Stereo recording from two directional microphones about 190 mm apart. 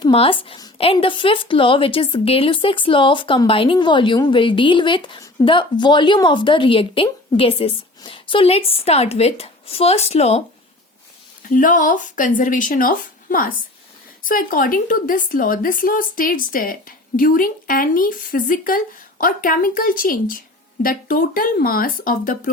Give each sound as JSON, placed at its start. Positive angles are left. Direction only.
{"t": 0.0, "sound": "a woman's voice", "side_deg": 30}
{"t": 11.4, "sound": "a woman's voice", "side_deg": 45}